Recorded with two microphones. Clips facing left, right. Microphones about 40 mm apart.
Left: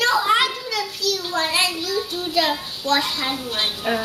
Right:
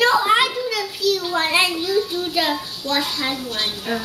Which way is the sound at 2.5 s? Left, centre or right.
Centre.